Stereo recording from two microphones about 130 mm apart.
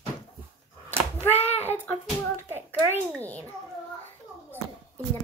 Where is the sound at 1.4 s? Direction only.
15° left (ahead or behind).